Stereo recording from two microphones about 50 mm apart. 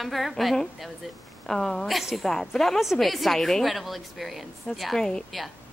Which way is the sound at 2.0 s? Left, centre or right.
Centre.